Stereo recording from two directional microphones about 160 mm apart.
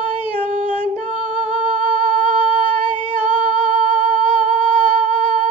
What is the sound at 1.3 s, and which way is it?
Humming, 45° right (ahead or behind).